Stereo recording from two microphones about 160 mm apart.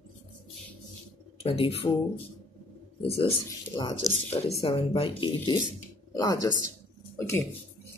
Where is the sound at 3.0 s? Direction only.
35° left (ahead or behind).